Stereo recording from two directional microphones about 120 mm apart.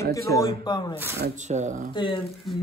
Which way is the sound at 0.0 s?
25° left (ahead or behind).